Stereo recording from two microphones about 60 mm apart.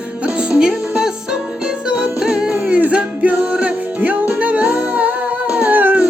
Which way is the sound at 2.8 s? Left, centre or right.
Right.